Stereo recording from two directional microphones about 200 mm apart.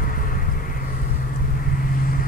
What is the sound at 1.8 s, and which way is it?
Vehicle, 45° left (ahead or behind).